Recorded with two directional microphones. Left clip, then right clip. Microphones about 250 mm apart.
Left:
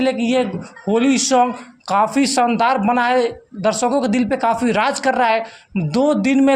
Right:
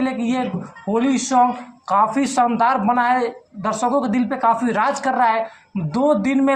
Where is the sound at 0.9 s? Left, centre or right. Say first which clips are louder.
Left 2 dB; left.